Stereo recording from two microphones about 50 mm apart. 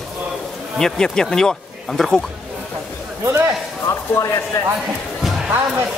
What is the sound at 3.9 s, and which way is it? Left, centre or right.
Speech, left.